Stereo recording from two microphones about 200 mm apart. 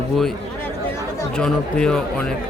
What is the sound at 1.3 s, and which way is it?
Speech, 5° left (ahead or behind).